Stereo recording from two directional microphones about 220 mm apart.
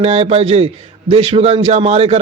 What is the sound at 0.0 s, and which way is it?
A man's voice, 30° right (ahead or behind).